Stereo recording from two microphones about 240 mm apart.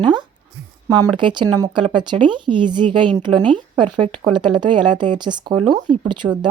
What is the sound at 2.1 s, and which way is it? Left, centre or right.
Speech, right.